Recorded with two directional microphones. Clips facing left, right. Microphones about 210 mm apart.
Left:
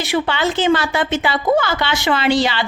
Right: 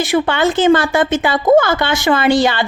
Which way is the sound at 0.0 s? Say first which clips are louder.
Right 4 dB; 50° right (ahead or behind).